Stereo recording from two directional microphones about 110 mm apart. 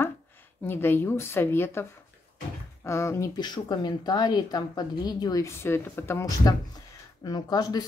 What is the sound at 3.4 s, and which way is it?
A woman's voice, 40° left (ahead or behind).